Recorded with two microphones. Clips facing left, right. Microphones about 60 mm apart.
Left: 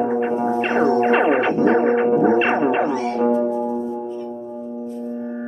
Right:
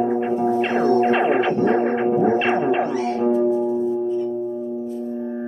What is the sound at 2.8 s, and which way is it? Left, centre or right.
Music, centre.